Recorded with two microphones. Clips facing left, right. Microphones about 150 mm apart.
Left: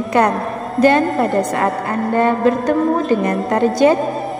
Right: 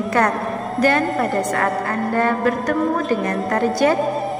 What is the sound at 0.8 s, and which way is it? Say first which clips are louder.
A woman's voice: left 5 dB; 25° left (ahead or behind).